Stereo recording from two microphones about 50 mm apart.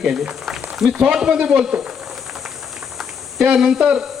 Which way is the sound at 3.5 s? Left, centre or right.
Centre.